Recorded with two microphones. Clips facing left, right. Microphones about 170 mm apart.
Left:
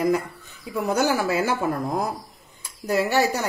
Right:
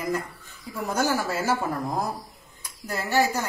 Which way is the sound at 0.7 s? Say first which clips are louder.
Left 4 dB; 65° left (ahead or behind).